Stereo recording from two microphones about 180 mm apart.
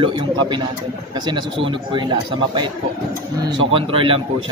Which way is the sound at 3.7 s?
30° right (ahead or behind).